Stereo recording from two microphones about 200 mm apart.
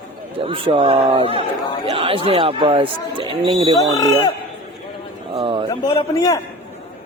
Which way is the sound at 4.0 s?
20° left (ahead or behind).